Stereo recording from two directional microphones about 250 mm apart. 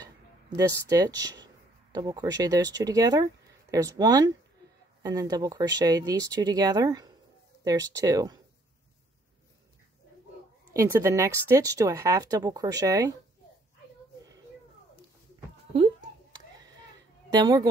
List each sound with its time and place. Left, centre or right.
0.6 s speech: centre
10.7 s speech: centre
15.7 s a sound: centre
17.4 s speech: centre